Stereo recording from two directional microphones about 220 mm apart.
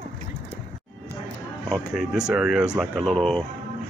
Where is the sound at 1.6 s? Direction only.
Centre (ahead or behind).